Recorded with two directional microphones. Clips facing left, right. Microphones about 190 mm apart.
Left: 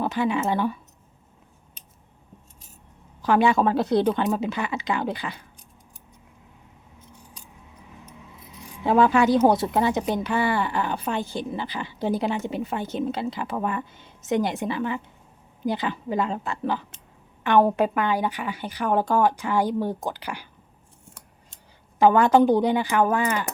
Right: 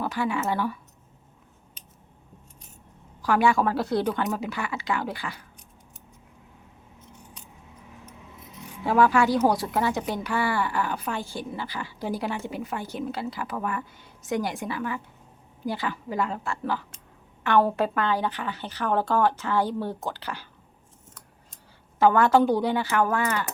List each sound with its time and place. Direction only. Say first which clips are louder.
0.0 s a woman's voice: left 3 dB; 20° left (ahead or behind)
3.2 s a woman's voice: left 2 dB; 20° left (ahead or behind)
8.8 s a woman's voice: left 2 dB; 20° left (ahead or behind)
21.5 s speech: even; 15° left (ahead or behind)